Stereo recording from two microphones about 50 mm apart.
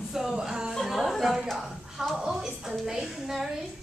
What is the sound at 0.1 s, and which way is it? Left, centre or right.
Music, centre.